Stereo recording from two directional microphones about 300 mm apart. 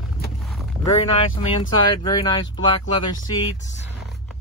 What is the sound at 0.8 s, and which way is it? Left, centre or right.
Speech, centre.